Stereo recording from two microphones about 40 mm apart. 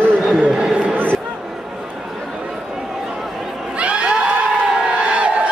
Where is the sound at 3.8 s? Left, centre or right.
Right.